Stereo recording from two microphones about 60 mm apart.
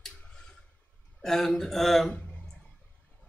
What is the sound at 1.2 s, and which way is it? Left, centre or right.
Speech, centre.